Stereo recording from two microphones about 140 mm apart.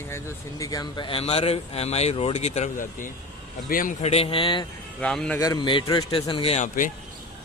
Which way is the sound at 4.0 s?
45° left (ahead or behind).